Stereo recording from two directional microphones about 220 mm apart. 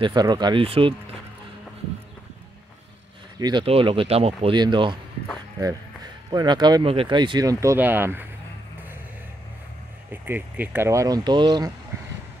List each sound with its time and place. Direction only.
0.0 s speech: 20° right (ahead or behind)
3.3 s speech: 20° right (ahead or behind)
6.3 s speech: 20° right (ahead or behind)
10.2 s speech: 10° right (ahead or behind)